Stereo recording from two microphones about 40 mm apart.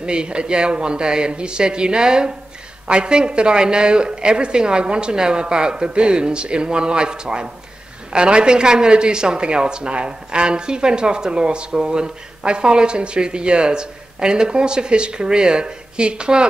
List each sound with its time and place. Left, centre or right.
0.0 s a woman's voice: right